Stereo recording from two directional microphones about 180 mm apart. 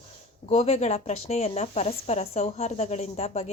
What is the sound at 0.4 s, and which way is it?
Speech, 35° left (ahead or behind).